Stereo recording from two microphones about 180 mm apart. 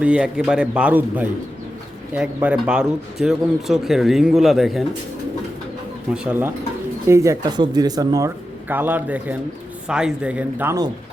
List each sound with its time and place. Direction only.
0.0 s speech: 5° right (ahead or behind)
6.2 s speech: 10° right (ahead or behind)
8.7 s speech: 10° right (ahead or behind)